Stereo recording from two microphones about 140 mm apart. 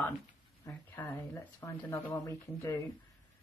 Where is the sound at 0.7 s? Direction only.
15° left (ahead or behind).